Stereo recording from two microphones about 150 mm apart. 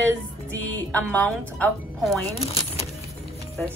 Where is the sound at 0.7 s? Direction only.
10° left (ahead or behind).